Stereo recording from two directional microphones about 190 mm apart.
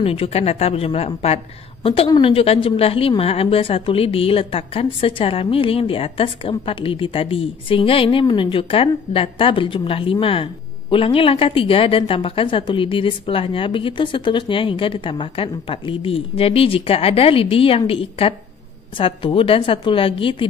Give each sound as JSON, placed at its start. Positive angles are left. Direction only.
{"t": 0.0, "sound": "a woman's voice", "side_deg": 30}